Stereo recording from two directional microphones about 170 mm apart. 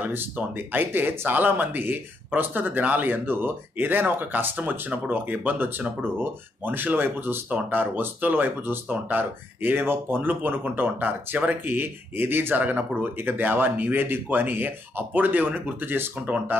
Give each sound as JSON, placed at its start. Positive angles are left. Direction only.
{"t": 0.0, "sound": "speech", "side_deg": -10}